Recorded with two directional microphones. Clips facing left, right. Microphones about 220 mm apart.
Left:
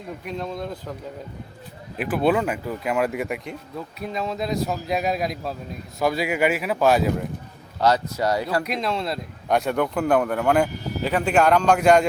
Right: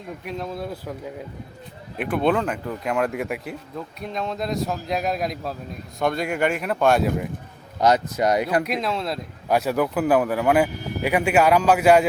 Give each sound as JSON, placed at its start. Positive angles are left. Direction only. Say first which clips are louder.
{"t": 0.3, "sound": "speech", "louder": "even", "side_deg": -5}
{"t": 2.0, "sound": "speech", "louder": "even", "side_deg": 5}
{"t": 7.8, "sound": "speech", "louder": "right 2 dB", "side_deg": -20}
{"t": 8.6, "sound": "speech", "louder": "even", "side_deg": 0}